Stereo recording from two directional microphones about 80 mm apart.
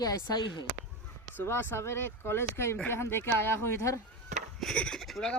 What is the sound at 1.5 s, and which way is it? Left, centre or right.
Speech, left.